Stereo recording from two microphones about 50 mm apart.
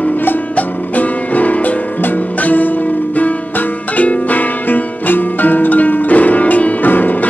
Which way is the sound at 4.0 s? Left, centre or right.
Left.